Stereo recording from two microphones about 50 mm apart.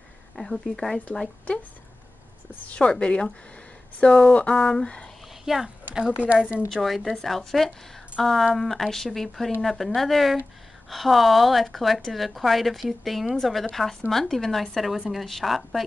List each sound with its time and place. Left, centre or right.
1.1 s speech: centre
2.6 s a woman's voice: left
5.4 s speech: centre
6.7 s a woman's voice: centre